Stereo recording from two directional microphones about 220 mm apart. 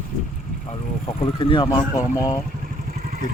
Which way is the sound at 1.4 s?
20° left (ahead or behind).